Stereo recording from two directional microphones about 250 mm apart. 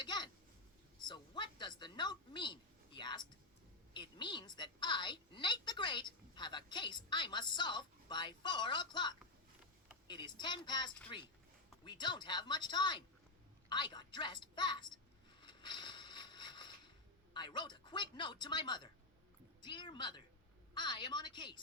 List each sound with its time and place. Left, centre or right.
0.0 s a woman's voice: centre
15.4 s a sound: centre
17.3 s a woman's voice: centre